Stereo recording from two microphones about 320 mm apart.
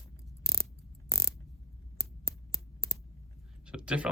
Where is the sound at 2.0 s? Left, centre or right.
Right.